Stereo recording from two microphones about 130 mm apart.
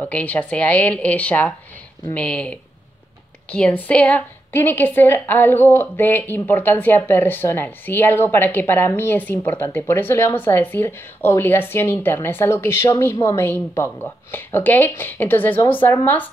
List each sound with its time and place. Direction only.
0.0 s a woman's voice: 10° left (ahead or behind)
3.5 s a woman's voice: 10° left (ahead or behind)